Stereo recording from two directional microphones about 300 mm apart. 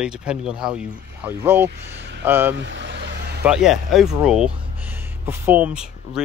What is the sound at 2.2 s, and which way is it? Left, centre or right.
Speech, centre.